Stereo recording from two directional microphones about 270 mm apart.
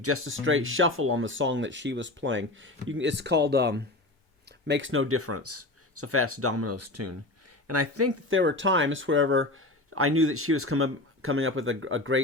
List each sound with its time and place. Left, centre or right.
0.0 s speech: right